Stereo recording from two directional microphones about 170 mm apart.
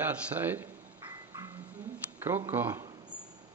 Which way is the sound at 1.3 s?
15° right (ahead or behind).